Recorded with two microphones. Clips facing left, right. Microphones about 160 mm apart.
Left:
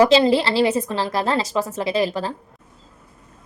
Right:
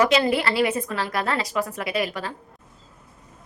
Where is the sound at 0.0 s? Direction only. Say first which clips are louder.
Left 5 dB; 30° left (ahead or behind).